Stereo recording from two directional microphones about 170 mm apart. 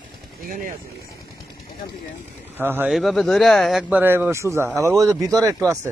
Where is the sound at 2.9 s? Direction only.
Centre (ahead or behind).